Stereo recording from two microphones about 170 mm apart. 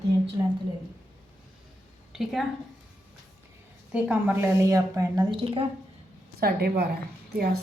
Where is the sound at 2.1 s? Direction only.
Centre (ahead or behind).